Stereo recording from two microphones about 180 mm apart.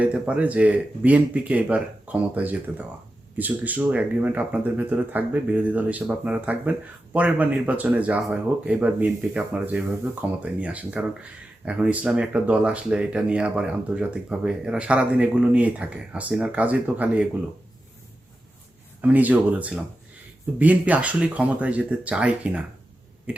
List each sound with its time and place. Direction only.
0.0 s speech: 5° right (ahead or behind)
19.0 s speech: 10° right (ahead or behind)